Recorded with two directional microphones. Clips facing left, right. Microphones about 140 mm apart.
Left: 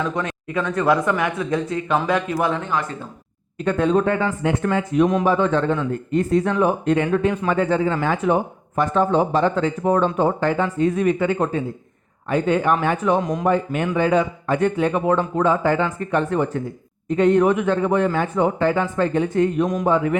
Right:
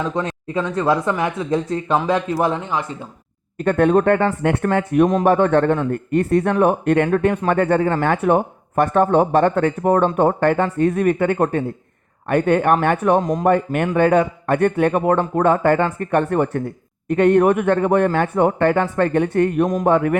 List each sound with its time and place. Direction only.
0.0 s speech: 30° right (ahead or behind)
2.6 s speech: 25° right (ahead or behind)
3.6 s a man's voice: 55° right (ahead or behind)